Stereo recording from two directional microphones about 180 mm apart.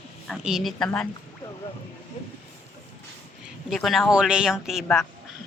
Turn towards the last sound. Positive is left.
turn(degrees=5)  # may be behind; listen again after turning